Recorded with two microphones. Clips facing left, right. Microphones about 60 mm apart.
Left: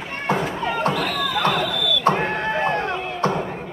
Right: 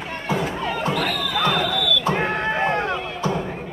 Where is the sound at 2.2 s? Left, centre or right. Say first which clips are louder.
Even; centre.